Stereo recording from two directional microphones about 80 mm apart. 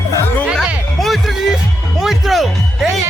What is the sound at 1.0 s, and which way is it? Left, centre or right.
Music, centre.